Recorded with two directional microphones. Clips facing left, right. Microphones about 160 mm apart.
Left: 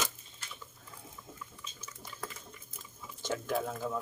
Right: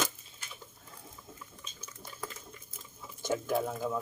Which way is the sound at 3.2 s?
10° right (ahead or behind).